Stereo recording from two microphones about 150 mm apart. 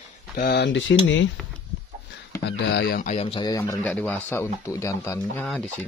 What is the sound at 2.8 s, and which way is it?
Speech, 90° left.